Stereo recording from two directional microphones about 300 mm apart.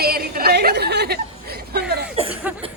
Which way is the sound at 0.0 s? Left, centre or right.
Right.